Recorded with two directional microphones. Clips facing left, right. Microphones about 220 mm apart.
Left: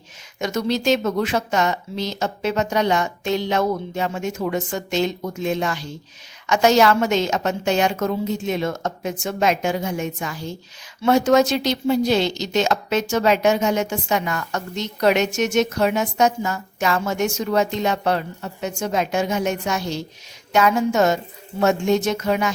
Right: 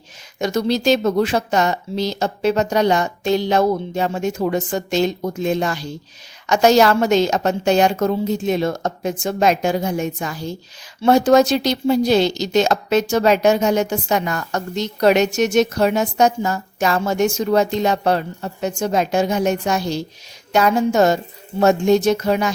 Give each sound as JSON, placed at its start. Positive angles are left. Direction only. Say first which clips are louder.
{"t": 0.3, "sound": "speech", "louder": "right 3 dB", "side_deg": -35}